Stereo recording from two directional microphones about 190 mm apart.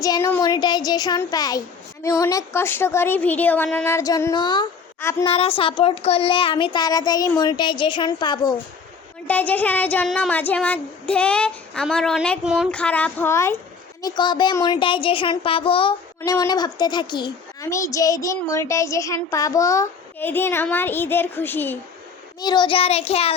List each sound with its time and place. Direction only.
0.0 s speech: 15° left (ahead or behind)
4.9 s a woman's voice: 10° left (ahead or behind)
5.2 s speech: 30° left (ahead or behind)
9.2 s speech: 10° left (ahead or behind)
22.4 s child singing: 20° left (ahead or behind)